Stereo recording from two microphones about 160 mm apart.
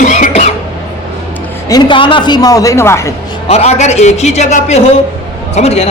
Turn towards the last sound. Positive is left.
turn(degrees=40)  # may be behind; listen again after turning